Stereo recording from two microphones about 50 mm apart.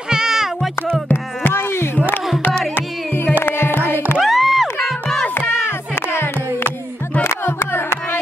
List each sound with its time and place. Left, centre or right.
0.1 s music: centre
1.5 s a sound: left
3.4 s music: left
4.2 s music: centre
5.9 s music: left